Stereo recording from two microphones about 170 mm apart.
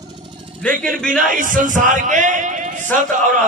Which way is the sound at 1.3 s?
50° right (ahead or behind).